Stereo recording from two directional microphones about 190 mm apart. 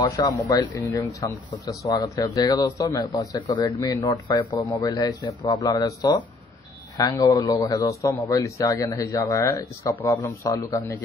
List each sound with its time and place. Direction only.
0.1 s speech: 20° left (ahead or behind)